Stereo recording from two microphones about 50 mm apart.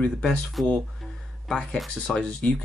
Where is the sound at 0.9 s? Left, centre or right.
Centre.